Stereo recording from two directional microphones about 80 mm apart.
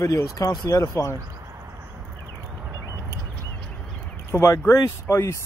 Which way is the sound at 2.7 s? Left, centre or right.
Right.